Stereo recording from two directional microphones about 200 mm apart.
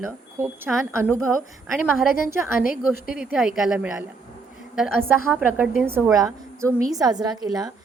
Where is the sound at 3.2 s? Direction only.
5° right (ahead or behind).